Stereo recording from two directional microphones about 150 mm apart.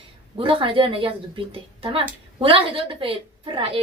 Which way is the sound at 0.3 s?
35° right (ahead or behind).